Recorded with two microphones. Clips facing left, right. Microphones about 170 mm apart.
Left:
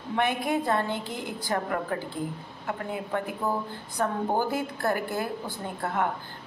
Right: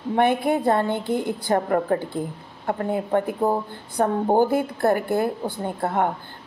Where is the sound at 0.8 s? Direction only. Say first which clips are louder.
Right 9 dB; 55° right (ahead or behind).